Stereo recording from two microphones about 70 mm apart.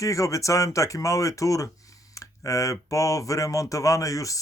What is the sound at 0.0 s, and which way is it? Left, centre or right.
Speech, left.